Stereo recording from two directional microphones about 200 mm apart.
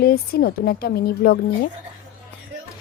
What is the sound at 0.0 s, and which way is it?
A woman's voice, 50° left (ahead or behind).